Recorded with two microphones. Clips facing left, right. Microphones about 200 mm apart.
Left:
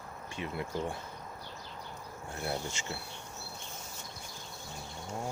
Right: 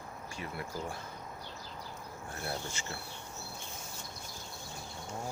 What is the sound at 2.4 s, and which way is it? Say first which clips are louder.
Insect: left 3 dB; 15° left (ahead or behind).